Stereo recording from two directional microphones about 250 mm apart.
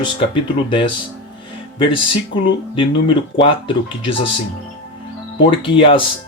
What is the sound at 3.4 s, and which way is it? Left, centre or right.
Speech, centre.